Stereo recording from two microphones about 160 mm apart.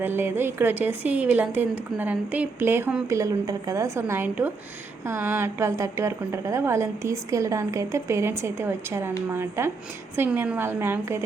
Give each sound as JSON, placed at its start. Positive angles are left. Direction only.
{"t": 0.0, "sound": "a woman's voice", "side_deg": -15}